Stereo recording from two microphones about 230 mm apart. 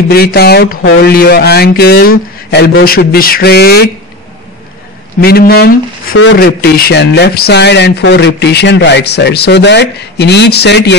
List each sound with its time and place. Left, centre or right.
0.1 s speech: left
5.2 s speech: left